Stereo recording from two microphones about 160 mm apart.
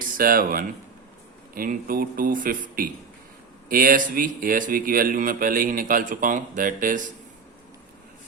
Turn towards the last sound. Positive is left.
turn(degrees=-55)  # may be behind; listen again after turning